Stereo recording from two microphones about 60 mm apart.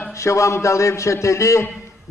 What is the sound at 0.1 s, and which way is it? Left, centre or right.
A man's voice, left.